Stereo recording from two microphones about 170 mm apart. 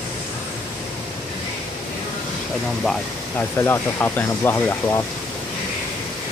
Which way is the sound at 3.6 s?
15° left (ahead or behind).